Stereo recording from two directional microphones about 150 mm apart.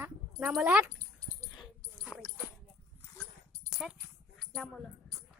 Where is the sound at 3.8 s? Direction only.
Centre (ahead or behind).